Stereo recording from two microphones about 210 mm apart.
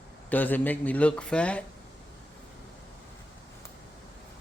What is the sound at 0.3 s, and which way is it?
A man's voice, 10° left (ahead or behind).